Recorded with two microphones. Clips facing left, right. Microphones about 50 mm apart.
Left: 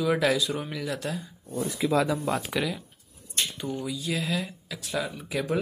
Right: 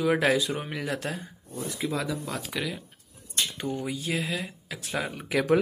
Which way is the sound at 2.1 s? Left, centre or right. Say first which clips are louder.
Left 5 dB; left.